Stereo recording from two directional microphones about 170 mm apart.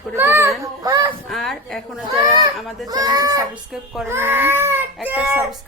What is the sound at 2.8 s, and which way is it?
A child's voice, 20° right (ahead or behind).